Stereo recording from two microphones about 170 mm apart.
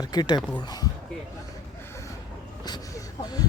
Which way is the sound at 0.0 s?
25° left (ahead or behind).